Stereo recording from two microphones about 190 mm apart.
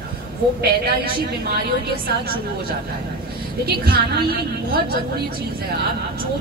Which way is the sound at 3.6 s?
55° right (ahead or behind).